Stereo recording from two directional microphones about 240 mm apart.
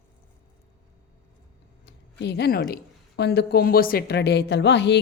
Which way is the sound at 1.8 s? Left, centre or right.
Left.